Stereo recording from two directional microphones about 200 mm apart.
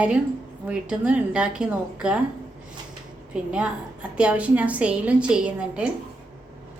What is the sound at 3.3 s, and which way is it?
A woman's voice, 5° right (ahead or behind).